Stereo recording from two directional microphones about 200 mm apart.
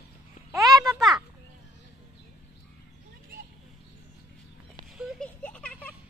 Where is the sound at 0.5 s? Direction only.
20° right (ahead or behind).